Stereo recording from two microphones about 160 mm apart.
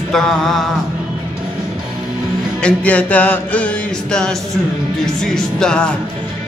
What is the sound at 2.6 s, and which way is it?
Music, 10° left (ahead or behind).